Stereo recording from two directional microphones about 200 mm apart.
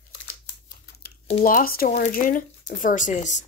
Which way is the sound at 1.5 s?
45° left (ahead or behind).